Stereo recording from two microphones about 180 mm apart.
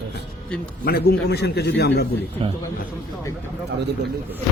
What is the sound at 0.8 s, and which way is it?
Speech, 60° left (ahead or behind).